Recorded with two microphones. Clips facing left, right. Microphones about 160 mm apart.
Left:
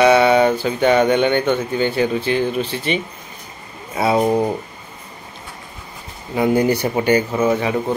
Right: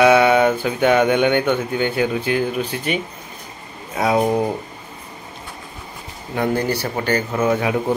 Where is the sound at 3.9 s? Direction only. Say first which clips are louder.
Left 1 dB; 5° left (ahead or behind).